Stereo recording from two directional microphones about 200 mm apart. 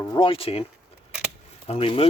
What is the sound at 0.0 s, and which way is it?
Speech, 25° left (ahead or behind).